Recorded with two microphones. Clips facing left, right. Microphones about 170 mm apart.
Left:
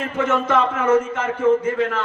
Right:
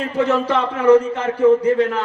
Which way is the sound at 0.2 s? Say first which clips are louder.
Right 1 dB; 35° right (ahead or behind).